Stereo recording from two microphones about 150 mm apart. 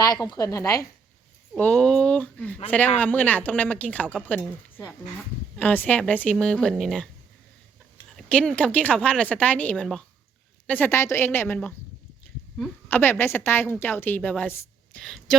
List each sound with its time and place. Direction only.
0.0 s a woman's voice: 25° left (ahead or behind)
1.5 s a woman's voice: 10° left (ahead or behind)
8.1 s a woman's voice: 5° left (ahead or behind)
15.0 s speech: 5° left (ahead or behind)